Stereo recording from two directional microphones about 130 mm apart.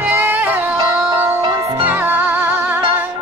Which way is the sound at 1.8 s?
15° right (ahead or behind).